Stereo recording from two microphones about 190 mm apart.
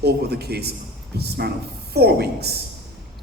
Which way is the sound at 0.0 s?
60° right (ahead or behind).